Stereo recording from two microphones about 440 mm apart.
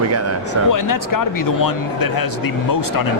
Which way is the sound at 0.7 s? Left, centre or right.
Left.